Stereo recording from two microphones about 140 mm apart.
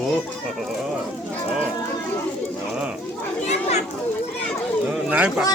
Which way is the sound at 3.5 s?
50° left (ahead or behind).